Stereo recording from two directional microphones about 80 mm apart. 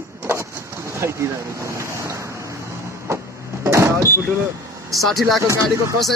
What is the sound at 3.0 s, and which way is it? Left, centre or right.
Vehicle, right.